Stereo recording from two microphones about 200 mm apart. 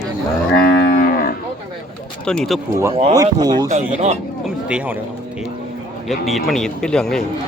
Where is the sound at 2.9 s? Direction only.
30° right (ahead or behind).